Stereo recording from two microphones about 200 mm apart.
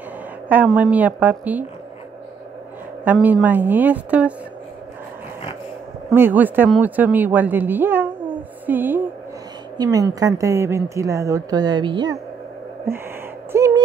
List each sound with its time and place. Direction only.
0.7 s a woman's voice: 5° right (ahead or behind)
3.1 s a woman's voice: 10° right (ahead or behind)
6.1 s a woman's voice: 10° right (ahead or behind)
13.5 s a sound: 10° right (ahead or behind)